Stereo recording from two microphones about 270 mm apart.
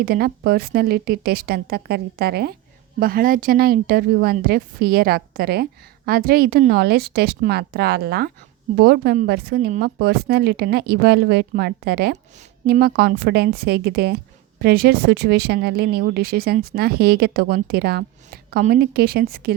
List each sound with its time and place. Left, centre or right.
0.0 s speech: right